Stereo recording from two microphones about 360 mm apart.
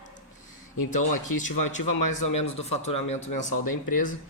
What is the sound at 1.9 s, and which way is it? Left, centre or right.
Speech, left.